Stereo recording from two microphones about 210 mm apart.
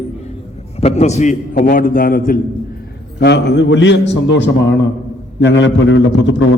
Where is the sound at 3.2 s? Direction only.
55° left (ahead or behind).